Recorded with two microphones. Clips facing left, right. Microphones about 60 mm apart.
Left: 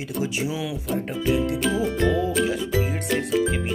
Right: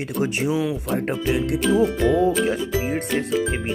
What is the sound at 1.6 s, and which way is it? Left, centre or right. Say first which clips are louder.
Music: right 7 dB; centre.